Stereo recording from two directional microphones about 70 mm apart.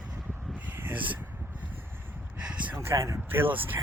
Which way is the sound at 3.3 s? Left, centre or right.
Right.